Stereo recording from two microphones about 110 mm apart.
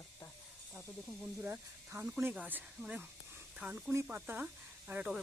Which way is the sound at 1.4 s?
20° right (ahead or behind).